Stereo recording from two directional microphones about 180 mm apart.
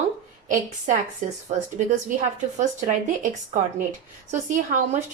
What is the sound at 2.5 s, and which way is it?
Speech, 45° right (ahead or behind).